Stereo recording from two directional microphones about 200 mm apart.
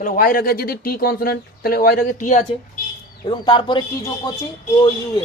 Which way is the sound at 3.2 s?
25° left (ahead or behind).